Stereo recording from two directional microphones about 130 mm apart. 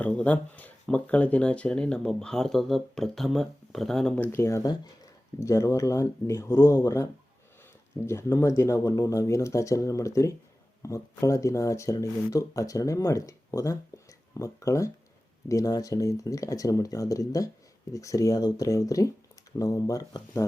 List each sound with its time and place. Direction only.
0.0 s speech: 10° left (ahead or behind); by 20.4 s 25° left (ahead or behind)